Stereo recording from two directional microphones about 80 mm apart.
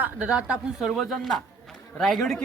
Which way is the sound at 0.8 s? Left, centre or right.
Centre.